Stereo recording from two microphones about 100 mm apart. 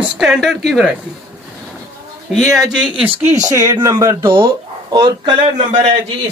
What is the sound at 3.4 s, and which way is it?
Speech, 35° right (ahead or behind).